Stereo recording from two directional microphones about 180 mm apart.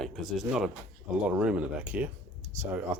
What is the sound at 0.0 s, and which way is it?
Speech, centre (ahead or behind).